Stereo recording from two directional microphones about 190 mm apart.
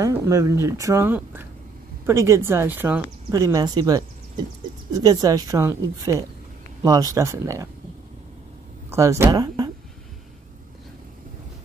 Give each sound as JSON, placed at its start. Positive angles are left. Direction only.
{"t": 0.0, "sound": "speech", "side_deg": -15}
{"t": 8.9, "sound": "speech", "side_deg": -15}